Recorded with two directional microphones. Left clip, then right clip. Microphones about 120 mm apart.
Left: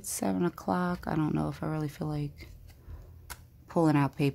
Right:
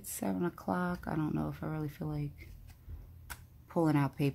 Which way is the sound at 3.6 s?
30° left (ahead or behind).